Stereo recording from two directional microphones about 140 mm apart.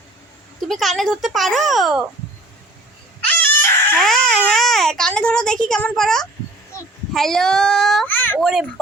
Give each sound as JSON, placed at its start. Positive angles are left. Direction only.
{"t": 0.7, "sound": "a child's voice", "side_deg": 0}
{"t": 3.2, "sound": "a sound", "side_deg": 15}
{"t": 3.9, "sound": "a child's voice", "side_deg": 0}
{"t": 8.0, "sound": "a child's voice", "side_deg": 15}
{"t": 8.4, "sound": "a child's voice", "side_deg": 0}